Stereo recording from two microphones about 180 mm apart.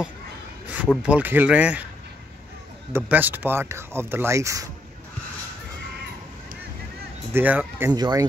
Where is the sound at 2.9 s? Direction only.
10° right (ahead or behind).